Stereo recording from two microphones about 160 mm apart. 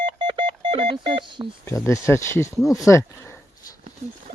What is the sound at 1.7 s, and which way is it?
Speech, 20° left (ahead or behind).